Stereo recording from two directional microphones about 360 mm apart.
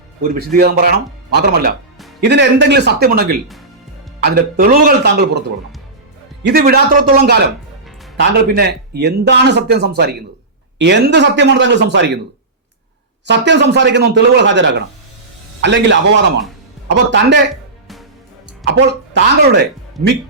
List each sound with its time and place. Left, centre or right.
0.2 s a man's voice: right
6.4 s a man's voice: right
13.2 s a man's voice: right
18.6 s a man's voice: right